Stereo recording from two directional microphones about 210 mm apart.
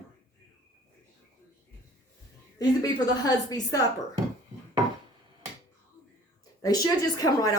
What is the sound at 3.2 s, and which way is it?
Speech, 15° left (ahead or behind).